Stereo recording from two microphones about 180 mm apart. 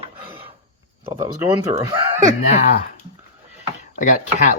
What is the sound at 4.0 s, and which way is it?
Speech, 45° left (ahead or behind).